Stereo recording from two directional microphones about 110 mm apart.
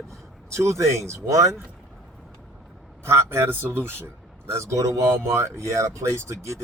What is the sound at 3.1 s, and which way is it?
Speech, 25° right (ahead or behind).